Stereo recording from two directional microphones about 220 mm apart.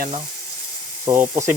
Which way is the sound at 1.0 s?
10° right (ahead or behind).